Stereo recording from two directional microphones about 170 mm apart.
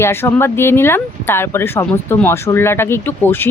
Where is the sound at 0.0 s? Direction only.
15° left (ahead or behind).